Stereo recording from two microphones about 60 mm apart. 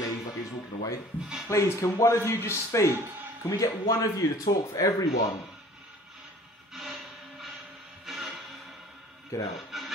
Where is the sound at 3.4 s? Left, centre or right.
Left.